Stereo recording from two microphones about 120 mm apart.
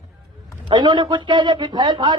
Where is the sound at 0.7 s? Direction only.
35° right (ahead or behind).